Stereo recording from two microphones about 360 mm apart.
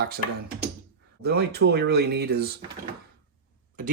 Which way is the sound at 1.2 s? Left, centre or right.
Right.